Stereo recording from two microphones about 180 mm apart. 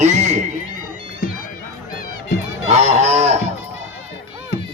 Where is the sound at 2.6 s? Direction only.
40° right (ahead or behind).